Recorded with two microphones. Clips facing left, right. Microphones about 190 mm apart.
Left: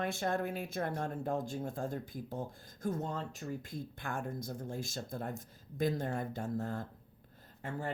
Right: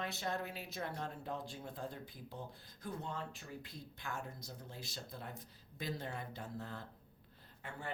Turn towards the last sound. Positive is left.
turn(degrees=45)  # may be behind; listen again after turning